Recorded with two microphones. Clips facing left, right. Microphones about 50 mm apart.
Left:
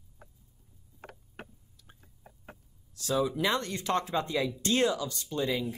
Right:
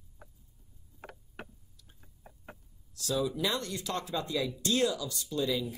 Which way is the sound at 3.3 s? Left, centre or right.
Left.